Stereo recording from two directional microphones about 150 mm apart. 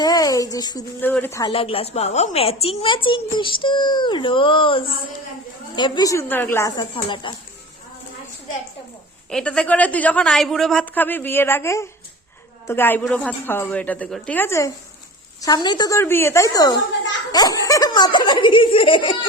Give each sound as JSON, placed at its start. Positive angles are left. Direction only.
{"t": 0.0, "sound": "speech", "side_deg": 25}
{"t": 1.0, "sound": "a woman's voice", "side_deg": 15}
{"t": 1.5, "sound": "a child's voice", "side_deg": 40}
{"t": 6.9, "sound": "a child's voice", "side_deg": 35}
{"t": 9.3, "sound": "a woman's voice", "side_deg": 5}